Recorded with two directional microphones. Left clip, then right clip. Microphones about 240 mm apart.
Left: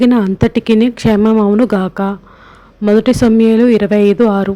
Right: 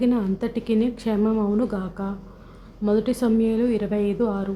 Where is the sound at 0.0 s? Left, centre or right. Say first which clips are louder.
Left 12 dB; left.